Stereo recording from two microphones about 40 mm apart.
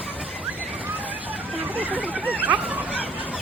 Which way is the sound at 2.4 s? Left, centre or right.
Right.